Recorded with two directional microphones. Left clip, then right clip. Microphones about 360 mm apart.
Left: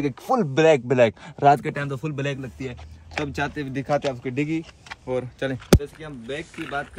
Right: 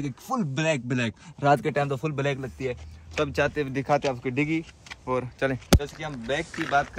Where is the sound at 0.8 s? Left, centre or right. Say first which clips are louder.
Left 11 dB; centre.